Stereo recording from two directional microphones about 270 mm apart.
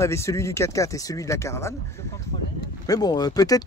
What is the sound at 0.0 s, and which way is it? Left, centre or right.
Speech, centre.